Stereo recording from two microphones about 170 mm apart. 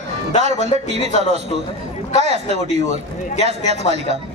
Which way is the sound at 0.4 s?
40° right (ahead or behind).